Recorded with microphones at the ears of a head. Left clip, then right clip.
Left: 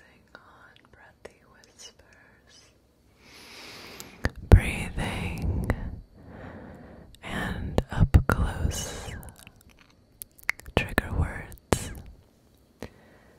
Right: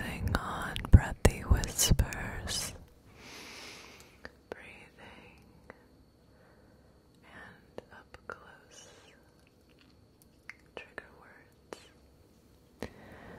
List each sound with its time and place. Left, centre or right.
0.0 s whispering: right
3.7 s whispering: left